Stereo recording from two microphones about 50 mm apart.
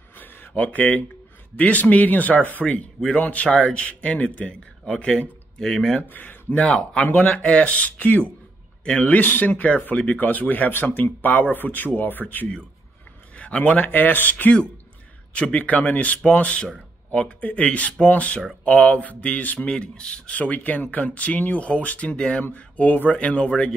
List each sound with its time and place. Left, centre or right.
0.1 s a sound: left
0.5 s speech: left
5.6 s speech: centre
6.0 s speech: left
13.4 s speech: left
15.3 s speech: left
19.7 s speech: centre